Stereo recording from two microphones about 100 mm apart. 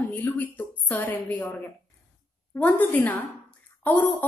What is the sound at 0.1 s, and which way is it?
A woman's voice, 20° left (ahead or behind).